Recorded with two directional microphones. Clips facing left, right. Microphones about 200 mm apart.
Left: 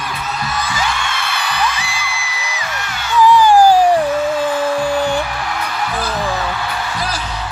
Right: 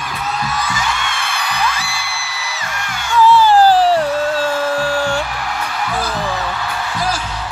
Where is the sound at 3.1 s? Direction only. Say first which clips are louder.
Left 1 dB; 15° left (ahead or behind).